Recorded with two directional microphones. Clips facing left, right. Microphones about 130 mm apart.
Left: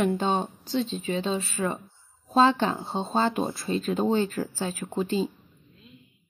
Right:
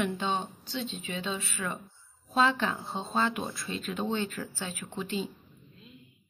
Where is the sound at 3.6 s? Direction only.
40° left (ahead or behind).